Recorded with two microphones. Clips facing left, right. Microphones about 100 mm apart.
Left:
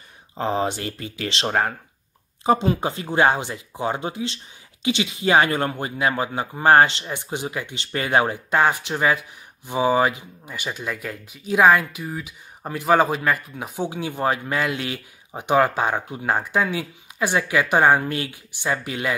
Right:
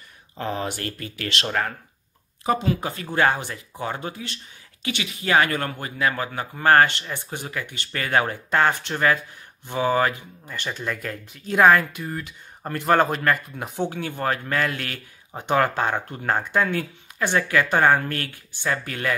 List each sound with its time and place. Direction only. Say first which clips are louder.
0.4 s speech: left 5 dB; 25° left (ahead or behind); by 13.8 s centre (ahead or behind)
13.8 s speech: left 3 dB; 15° left (ahead or behind)